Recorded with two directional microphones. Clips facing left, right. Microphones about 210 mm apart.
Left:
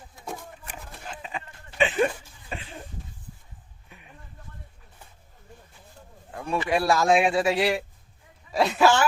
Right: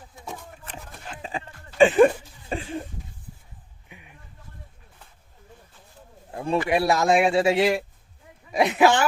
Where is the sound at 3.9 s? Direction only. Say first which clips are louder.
Right 3 dB; 15° right (ahead or behind).